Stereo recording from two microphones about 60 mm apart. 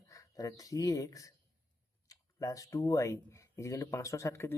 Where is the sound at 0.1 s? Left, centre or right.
Left.